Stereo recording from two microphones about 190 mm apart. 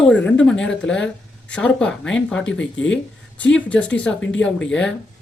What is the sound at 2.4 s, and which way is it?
Speech, 75° left (ahead or behind).